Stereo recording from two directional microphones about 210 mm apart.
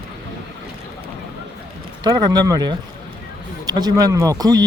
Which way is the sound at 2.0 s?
20° right (ahead or behind).